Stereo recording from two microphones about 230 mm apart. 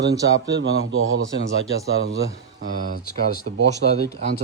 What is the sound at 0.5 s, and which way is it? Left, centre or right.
Speech, right.